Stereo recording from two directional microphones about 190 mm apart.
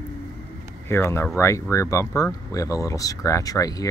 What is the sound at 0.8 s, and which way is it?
Speech, 15° left (ahead or behind).